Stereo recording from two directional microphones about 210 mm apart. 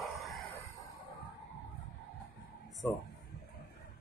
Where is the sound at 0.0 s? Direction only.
Centre (ahead or behind).